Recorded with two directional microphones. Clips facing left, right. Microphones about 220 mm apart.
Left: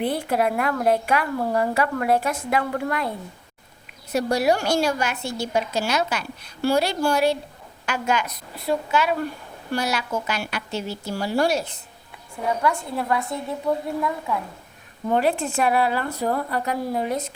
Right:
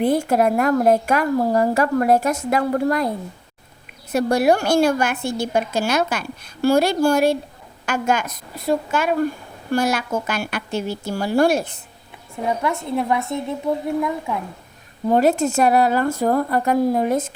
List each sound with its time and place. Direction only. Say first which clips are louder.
0.0 s a woman's voice: right 5 dB; 45° right (ahead or behind)
4.1 s a woman's voice: right 4 dB; 55° right (ahead or behind)
12.5 s a woman's voice: right 1 dB; 20° right (ahead or behind)
15.0 s a woman's voice: right 5 dB; 40° right (ahead or behind)